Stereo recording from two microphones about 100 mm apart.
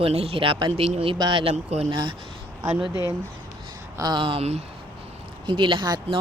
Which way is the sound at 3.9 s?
40° right (ahead or behind).